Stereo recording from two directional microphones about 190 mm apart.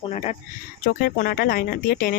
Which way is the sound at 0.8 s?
50° left (ahead or behind).